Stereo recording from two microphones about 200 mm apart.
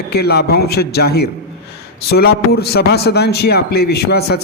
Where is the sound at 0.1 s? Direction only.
55° left (ahead or behind).